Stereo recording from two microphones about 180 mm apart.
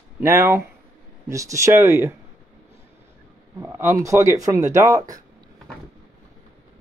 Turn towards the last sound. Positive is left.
turn(degrees=-20)  # may be behind; listen again after turning